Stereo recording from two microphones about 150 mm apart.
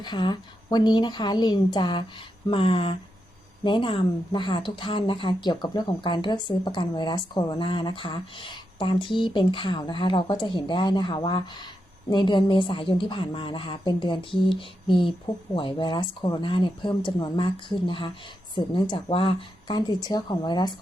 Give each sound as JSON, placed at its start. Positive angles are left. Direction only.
{"t": 0.0, "sound": "speech", "side_deg": 30}